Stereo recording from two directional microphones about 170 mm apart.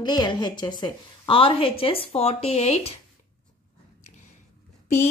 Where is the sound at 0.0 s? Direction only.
25° left (ahead or behind).